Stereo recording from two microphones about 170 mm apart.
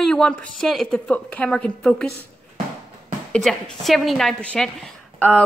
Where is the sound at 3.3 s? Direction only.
Centre (ahead or behind).